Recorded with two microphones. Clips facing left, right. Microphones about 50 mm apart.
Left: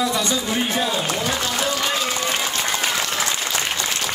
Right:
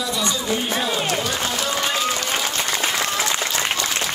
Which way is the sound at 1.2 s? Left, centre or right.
Left.